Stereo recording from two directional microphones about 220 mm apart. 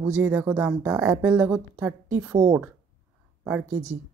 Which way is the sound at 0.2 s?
10° right (ahead or behind).